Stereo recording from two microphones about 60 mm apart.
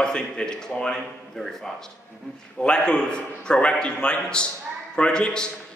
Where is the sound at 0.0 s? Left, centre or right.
Centre.